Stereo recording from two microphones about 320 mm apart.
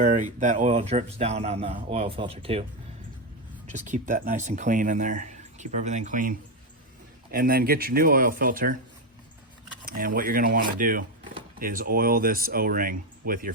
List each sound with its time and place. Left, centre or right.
0.0 s speech: right
3.7 s speech: right
9.8 s speech: right